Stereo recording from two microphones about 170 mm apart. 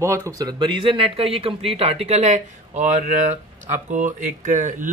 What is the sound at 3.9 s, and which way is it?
Speech, 50° right (ahead or behind).